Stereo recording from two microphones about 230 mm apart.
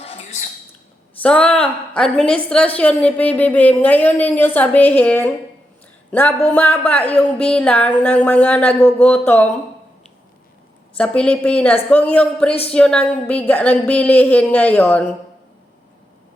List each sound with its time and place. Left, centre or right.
0.0 s a sound: left
1.2 s a woman's voice: centre
10.9 s a woman's voice: centre